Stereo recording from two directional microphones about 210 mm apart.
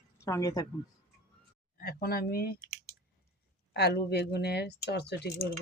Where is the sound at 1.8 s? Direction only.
45° left (ahead or behind).